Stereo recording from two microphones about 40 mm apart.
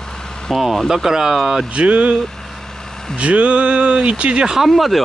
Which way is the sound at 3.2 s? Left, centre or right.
Right.